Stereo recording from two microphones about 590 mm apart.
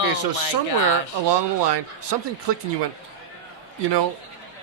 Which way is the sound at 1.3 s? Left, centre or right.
Right.